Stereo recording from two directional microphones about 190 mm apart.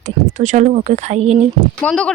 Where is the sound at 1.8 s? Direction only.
5° left (ahead or behind).